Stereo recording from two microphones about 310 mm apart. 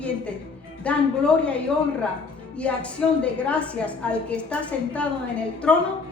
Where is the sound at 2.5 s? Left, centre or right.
Centre.